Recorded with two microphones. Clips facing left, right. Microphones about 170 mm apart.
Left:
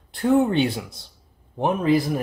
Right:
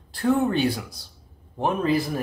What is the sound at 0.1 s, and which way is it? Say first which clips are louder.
Speech: left 3 dB; 20° left (ahead or behind).